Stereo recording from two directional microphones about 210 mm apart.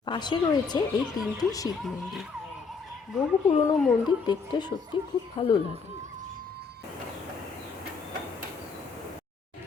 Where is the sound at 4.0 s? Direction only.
20° left (ahead or behind).